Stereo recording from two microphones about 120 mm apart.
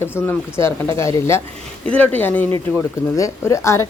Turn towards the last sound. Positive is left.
turn(degrees=25)  # may be behind; listen again after turning